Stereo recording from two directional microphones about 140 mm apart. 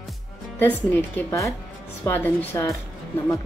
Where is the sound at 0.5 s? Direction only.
15° left (ahead or behind).